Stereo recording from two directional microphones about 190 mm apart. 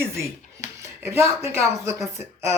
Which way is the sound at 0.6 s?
35° left (ahead or behind).